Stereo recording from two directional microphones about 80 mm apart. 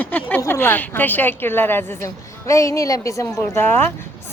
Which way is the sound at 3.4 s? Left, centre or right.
Left.